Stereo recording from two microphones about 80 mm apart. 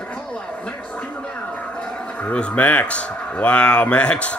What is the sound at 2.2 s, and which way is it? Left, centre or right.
Speech, centre.